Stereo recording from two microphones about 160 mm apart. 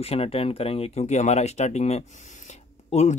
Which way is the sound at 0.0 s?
35° left (ahead or behind).